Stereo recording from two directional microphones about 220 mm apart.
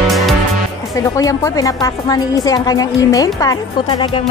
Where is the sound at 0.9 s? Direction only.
15° left (ahead or behind).